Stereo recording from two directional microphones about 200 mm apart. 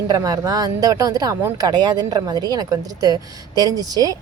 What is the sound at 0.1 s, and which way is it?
Speech, 20° right (ahead or behind).